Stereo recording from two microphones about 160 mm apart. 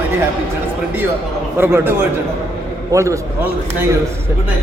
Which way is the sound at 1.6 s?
15° right (ahead or behind).